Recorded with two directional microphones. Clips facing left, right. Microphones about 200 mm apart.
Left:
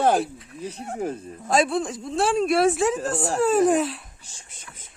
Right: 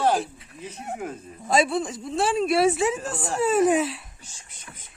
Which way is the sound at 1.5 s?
Centre (ahead or behind).